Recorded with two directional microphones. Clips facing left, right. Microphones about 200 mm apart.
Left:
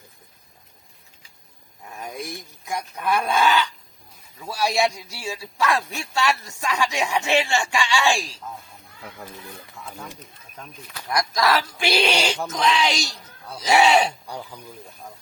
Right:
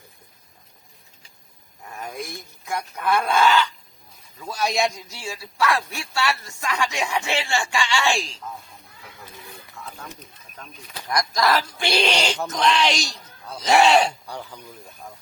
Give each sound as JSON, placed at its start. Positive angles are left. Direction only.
{"t": 2.3, "sound": "a man's voice", "side_deg": 15}
{"t": 11.1, "sound": "a man's voice", "side_deg": 5}